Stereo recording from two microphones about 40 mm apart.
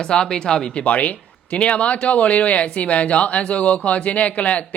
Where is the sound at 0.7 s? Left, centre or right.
Left.